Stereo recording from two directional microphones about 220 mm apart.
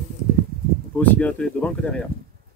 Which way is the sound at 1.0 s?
5° left (ahead or behind).